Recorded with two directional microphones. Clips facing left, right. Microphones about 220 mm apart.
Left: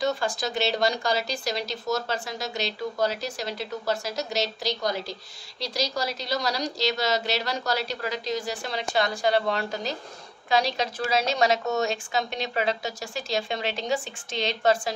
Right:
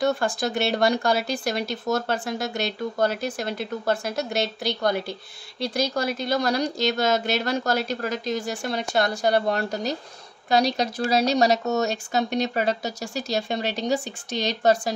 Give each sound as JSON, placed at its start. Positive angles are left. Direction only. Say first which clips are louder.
{"t": 0.0, "sound": "a woman's voice", "louder": "right 3 dB", "side_deg": -50}
{"t": 10.5, "sound": "speech", "louder": "right 3 dB", "side_deg": -40}